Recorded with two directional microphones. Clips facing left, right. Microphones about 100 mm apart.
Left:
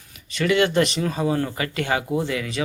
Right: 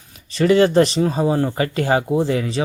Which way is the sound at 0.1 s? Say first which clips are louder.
Right 6 dB; 35° right (ahead or behind).